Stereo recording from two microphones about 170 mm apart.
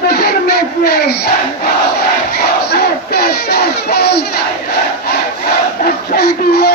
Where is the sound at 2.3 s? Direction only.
70° left (ahead or behind).